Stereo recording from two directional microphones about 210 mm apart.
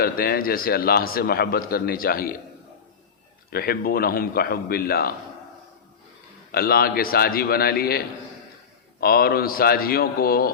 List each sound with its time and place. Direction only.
0.0 s a man's voice: 45° left (ahead or behind)
3.5 s a man's voice: 45° left (ahead or behind)
6.5 s a man's voice: 45° left (ahead or behind)